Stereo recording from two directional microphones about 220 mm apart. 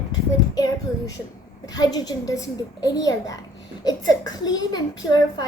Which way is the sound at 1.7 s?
15° left (ahead or behind).